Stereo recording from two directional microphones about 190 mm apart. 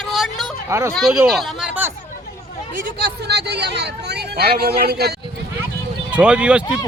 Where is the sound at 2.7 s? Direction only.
55° right (ahead or behind).